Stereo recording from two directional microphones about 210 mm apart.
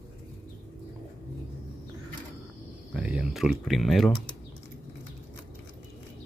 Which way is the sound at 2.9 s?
5° right (ahead or behind).